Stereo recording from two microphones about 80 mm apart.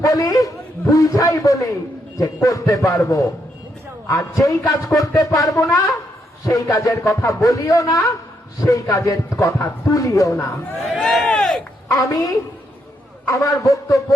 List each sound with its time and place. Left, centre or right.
0.0 s a man's voice: left
11.0 s speech: centre
11.9 s a man's voice: left